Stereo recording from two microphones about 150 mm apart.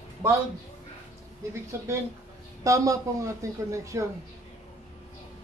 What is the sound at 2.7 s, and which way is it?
Speech, 20° right (ahead or behind).